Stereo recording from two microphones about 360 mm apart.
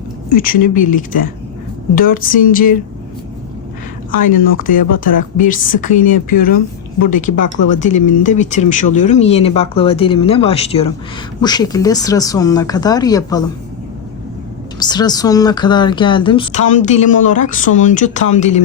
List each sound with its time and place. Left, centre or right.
0.3 s speech: left
4.3 s speech: left
7.3 s speech: left
7.7 s speech: centre
14.8 s speech: centre